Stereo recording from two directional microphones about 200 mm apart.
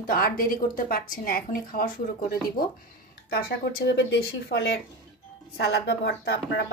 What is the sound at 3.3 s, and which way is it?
A woman's voice, 60° left (ahead or behind).